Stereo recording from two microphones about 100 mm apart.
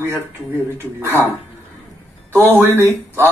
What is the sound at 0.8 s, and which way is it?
Speech, 25° right (ahead or behind).